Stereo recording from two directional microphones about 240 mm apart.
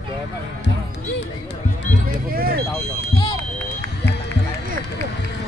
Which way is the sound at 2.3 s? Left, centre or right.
Right.